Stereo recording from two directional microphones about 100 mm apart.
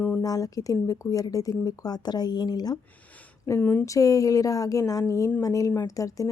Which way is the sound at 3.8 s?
35° left (ahead or behind).